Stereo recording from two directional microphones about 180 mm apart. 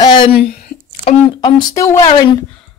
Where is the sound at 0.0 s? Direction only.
25° left (ahead or behind).